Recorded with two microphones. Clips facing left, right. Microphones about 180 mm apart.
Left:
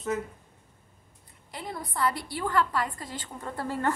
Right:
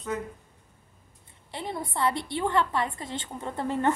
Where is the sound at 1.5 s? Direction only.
25° right (ahead or behind).